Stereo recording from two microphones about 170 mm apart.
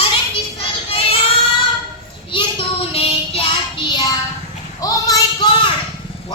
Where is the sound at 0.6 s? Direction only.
35° left (ahead or behind).